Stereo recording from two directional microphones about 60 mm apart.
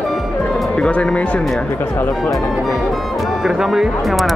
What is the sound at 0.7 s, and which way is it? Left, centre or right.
Speech, centre.